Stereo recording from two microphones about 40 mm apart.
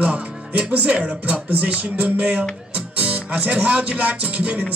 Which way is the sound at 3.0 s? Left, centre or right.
Right.